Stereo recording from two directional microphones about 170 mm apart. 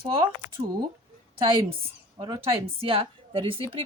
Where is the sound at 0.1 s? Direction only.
30° right (ahead or behind).